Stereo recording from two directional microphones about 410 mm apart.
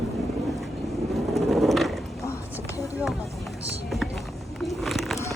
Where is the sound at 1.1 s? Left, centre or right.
Centre.